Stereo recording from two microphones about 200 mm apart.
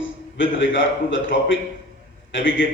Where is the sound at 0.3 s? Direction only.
70° left (ahead or behind).